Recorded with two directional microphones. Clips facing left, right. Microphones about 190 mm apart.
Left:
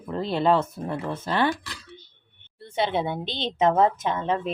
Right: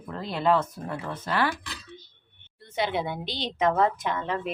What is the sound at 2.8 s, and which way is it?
Speech, 25° left (ahead or behind).